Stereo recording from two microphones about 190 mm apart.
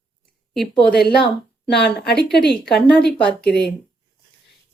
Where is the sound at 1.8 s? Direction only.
60° left (ahead or behind).